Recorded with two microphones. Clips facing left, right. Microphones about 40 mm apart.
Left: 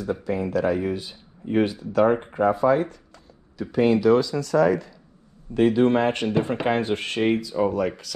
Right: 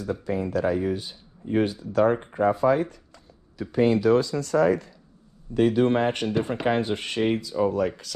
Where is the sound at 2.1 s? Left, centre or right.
Left.